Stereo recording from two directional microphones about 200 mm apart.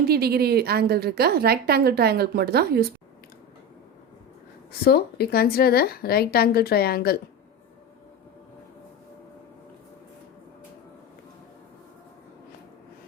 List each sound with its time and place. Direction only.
0.1 s a woman's voice: 50° right (ahead or behind)
4.8 s speech: 50° left (ahead or behind)